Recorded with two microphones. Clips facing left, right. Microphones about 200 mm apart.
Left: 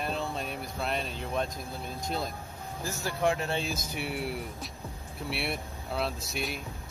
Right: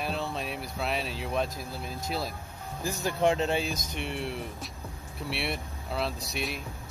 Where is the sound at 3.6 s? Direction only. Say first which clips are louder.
Right 1 dB; 5° left (ahead or behind).